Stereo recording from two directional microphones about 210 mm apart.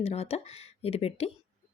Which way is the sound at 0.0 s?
30° left (ahead or behind).